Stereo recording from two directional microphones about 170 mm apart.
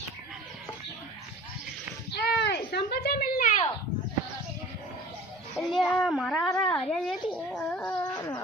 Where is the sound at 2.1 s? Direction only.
75° left (ahead or behind); by 3.7 s 50° left (ahead or behind).